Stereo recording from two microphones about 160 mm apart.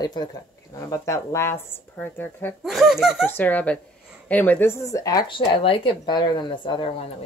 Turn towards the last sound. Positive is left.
turn(degrees=35)  # may be behind; listen again after turning